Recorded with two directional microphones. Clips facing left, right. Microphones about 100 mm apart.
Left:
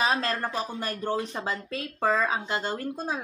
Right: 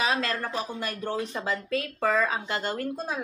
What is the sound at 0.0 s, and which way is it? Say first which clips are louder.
Speech: left 1 dB; 35° left (ahead or behind).